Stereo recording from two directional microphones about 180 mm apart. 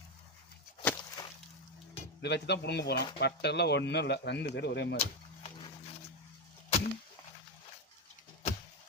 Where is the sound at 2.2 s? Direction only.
70° left (ahead or behind).